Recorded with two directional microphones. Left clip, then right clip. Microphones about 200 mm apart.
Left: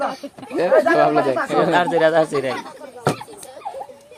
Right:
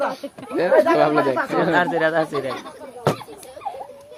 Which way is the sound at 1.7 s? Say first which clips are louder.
Left 4 dB; 30° left (ahead or behind).